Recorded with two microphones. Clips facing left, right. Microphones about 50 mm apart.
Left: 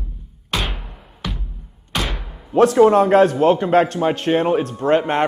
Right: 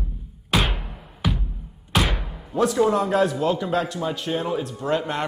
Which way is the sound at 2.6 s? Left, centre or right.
Left.